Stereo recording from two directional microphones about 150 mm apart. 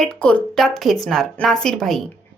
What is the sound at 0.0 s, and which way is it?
A woman's voice, 5° left (ahead or behind).